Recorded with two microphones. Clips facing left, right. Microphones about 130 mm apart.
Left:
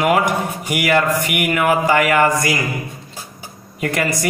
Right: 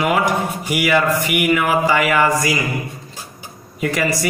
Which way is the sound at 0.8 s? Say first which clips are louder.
Even; 50° left (ahead or behind).